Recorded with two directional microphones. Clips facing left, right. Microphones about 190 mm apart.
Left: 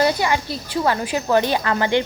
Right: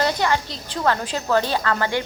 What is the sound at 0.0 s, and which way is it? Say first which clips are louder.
A woman's voice: left 2 dB; 10° left (ahead or behind).